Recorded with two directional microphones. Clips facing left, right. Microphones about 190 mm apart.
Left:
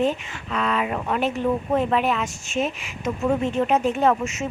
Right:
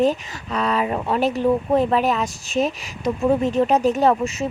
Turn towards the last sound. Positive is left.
turn(degrees=-35)  # may be behind; listen again after turning